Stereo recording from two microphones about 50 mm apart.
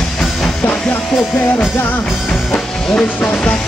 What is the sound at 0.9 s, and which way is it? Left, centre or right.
Music, left.